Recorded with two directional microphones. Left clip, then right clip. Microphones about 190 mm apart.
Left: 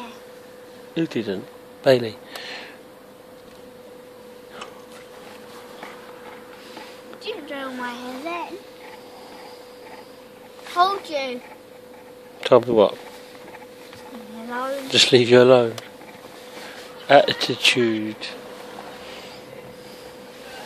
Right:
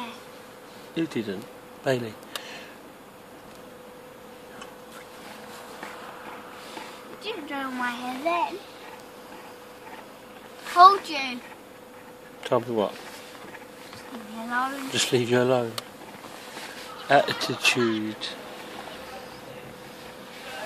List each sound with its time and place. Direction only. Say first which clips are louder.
0.9 s speech: left 4 dB; 30° left (ahead or behind)
7.5 s a sound: right 4 dB; 5° right (ahead or behind)
10.8 s a child's voice: right 5 dB; 10° right (ahead or behind)
12.4 s speech: left 10 dB; 40° left (ahead or behind)
14.9 s speech: left 12 dB; 40° left (ahead or behind)
17.1 s speech: left 6 dB; 30° left (ahead or behind)